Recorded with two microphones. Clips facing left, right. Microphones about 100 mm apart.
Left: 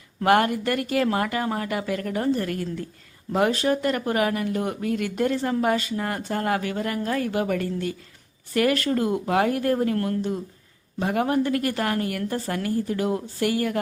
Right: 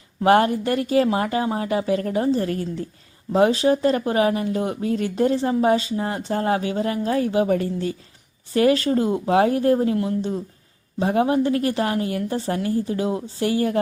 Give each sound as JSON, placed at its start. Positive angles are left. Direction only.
{"t": 0.3, "sound": "a woman's voice", "side_deg": -30}
{"t": 9.7, "sound": "speech", "side_deg": -15}
{"t": 11.0, "sound": "speech", "side_deg": -25}